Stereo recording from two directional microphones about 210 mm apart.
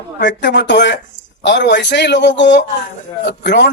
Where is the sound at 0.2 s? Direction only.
55° left (ahead or behind).